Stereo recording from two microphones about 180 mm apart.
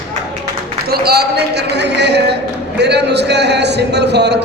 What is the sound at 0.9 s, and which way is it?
A man's voice, 60° right (ahead or behind).